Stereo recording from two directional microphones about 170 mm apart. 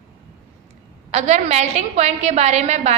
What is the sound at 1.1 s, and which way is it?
A woman's voice, 40° right (ahead or behind).